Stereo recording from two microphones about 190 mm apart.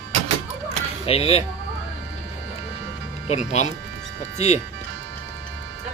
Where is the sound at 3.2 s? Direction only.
35° left (ahead or behind).